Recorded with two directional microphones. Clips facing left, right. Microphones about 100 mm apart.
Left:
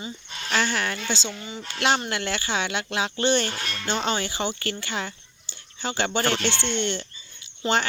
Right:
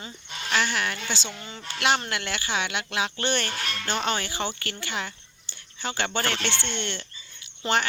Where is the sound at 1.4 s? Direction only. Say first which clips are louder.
Left 4 dB; 10° left (ahead or behind).